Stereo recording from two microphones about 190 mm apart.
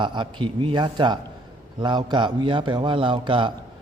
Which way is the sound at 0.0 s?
25° right (ahead or behind).